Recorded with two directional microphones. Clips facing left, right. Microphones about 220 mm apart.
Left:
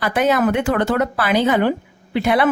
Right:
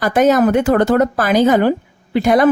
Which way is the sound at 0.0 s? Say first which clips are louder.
Right 5 dB; 45° right (ahead or behind).